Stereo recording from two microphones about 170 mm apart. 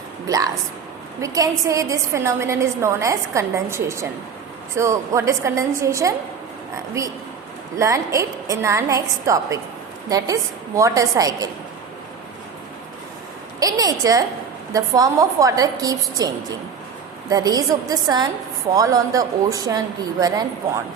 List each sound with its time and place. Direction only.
1.2 s a woman's voice: 20° right (ahead or behind)
13.6 s a woman's voice: 20° right (ahead or behind)